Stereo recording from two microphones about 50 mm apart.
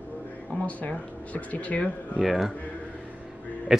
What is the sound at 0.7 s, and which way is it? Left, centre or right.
Speech, left.